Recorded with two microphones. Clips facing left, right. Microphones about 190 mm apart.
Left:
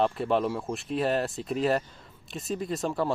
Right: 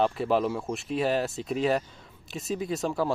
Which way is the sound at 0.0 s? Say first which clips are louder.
Right 1 dB; centre (ahead or behind).